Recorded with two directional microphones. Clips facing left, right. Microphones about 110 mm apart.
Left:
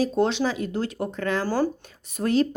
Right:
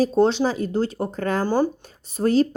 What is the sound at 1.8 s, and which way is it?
Speech, 35° right (ahead or behind).